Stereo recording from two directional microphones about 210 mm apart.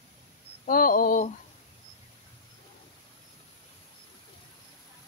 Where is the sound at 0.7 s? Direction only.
45° left (ahead or behind).